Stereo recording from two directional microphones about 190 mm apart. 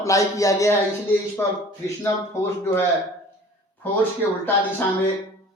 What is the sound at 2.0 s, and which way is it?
Speech, 15° left (ahead or behind).